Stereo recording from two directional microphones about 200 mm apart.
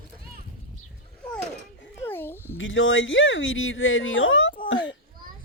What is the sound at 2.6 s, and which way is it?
Speech, 70° left (ahead or behind).